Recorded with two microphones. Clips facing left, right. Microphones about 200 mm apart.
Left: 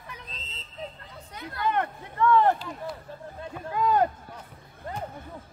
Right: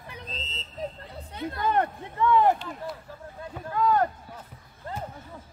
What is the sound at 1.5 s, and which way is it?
Speech, 40° right (ahead or behind).